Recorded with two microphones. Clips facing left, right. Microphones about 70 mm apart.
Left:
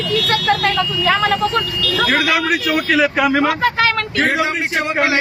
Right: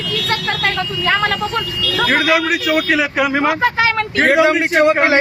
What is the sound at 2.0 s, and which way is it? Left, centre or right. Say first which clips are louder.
Speech: right 2 dB; centre.